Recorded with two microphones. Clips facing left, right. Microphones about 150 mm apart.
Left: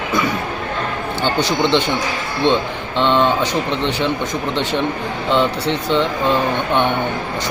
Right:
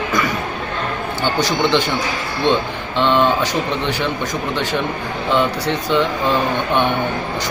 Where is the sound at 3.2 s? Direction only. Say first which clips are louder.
Even; 20° left (ahead or behind).